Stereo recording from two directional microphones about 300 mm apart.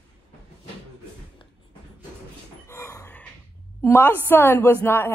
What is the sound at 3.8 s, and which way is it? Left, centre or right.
A woman's voice, centre.